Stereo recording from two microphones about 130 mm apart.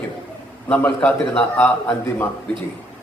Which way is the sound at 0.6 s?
15° left (ahead or behind).